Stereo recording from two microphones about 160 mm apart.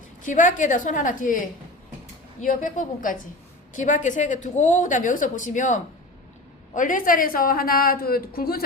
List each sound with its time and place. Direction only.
0.2 s a woman's voice: 55° left (ahead or behind)
2.4 s a woman's voice: 55° left (ahead or behind); by 8.6 s 70° left (ahead or behind)